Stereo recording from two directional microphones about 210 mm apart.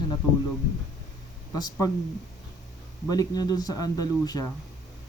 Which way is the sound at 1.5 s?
20° left (ahead or behind).